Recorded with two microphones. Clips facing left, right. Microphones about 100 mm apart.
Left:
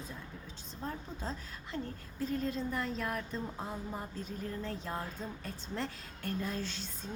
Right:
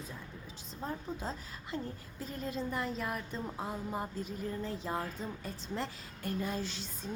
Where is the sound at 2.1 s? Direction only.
5° right (ahead or behind).